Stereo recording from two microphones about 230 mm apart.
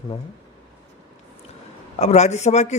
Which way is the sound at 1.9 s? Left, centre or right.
Left.